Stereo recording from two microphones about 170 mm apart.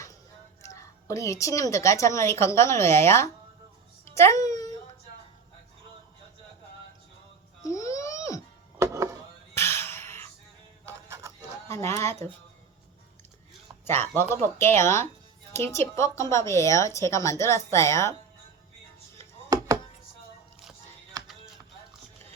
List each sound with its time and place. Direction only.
0.6 s a woman's voice: 15° left (ahead or behind)
4.0 s a sound: 15° left (ahead or behind)
7.6 s a sound: 20° left (ahead or behind)
8.8 s music: 20° right (ahead or behind)
9.6 s a sound: 15° left (ahead or behind)
10.8 s music: 15° right (ahead or behind)
11.7 s a woman's voice: 15° left (ahead or behind)
13.8 s a woman's voice: 15° left (ahead or behind)
19.5 s chopping: 20° right (ahead or behind)